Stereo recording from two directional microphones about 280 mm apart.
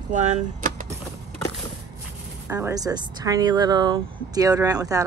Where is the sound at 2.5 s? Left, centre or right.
Centre.